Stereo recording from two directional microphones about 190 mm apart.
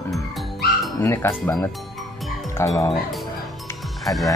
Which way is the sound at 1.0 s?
15° left (ahead or behind).